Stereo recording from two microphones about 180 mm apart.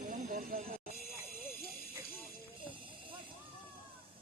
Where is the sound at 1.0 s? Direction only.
55° left (ahead or behind).